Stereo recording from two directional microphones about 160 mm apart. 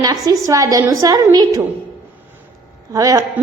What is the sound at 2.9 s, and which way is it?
Speech, 20° right (ahead or behind).